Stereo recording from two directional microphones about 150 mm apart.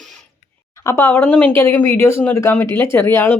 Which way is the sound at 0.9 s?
15° left (ahead or behind).